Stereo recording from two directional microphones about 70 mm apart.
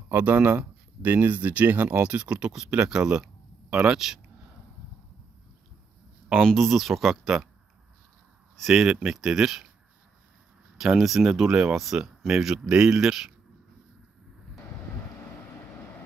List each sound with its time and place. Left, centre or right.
0.1 s speech: right; by 4.0 s centre
6.3 s speech: centre
8.5 s speech: centre
10.8 s speech: centre